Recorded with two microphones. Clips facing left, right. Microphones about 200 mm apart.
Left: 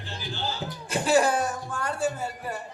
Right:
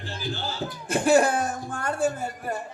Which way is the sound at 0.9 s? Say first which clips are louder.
Right 2 dB; 50° right (ahead or behind).